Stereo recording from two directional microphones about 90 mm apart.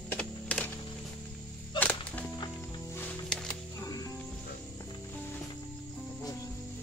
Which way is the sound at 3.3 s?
5° left (ahead or behind).